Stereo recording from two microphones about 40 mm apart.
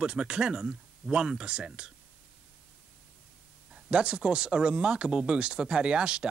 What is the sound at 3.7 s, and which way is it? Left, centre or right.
Speech, right.